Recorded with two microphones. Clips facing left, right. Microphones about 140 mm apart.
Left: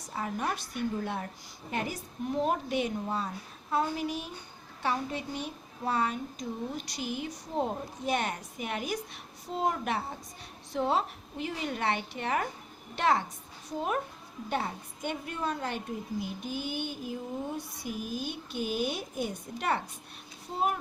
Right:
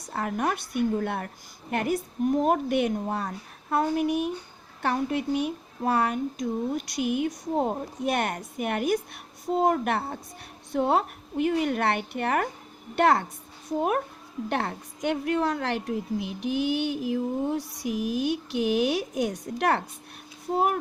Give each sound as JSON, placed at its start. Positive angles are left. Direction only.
{"t": 0.1, "sound": "a woman's voice", "side_deg": -60}
{"t": 14.5, "sound": "a woman's voice", "side_deg": -70}